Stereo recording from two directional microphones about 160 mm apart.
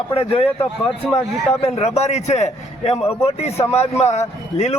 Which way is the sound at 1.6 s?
45° left (ahead or behind).